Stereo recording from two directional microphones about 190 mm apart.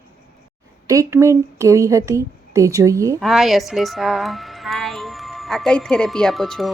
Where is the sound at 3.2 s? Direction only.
Centre (ahead or behind).